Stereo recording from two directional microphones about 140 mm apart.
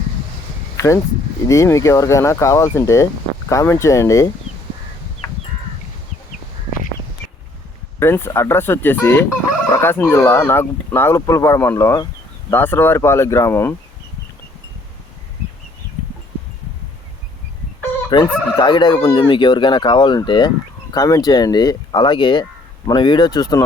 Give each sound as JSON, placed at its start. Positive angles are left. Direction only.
{"t": 0.8, "sound": "speech", "side_deg": 20}
{"t": 5.2, "sound": "crow", "side_deg": 25}
{"t": 7.9, "sound": "speech", "side_deg": 15}
{"t": 18.1, "sound": "chicken", "side_deg": 30}
{"t": 19.0, "sound": "speech", "side_deg": 30}